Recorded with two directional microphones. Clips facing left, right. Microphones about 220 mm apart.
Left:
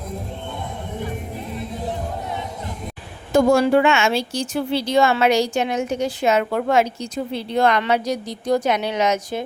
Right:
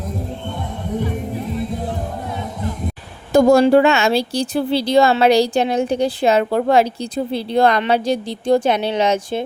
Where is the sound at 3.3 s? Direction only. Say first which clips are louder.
Right 4 dB; 40° right (ahead or behind).